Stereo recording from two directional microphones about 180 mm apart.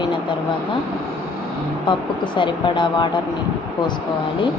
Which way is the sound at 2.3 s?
25° left (ahead or behind).